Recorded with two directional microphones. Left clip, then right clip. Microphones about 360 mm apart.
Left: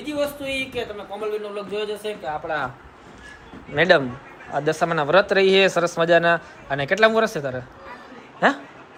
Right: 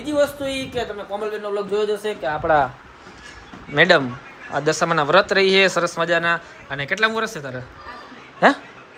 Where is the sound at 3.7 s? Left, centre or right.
Centre.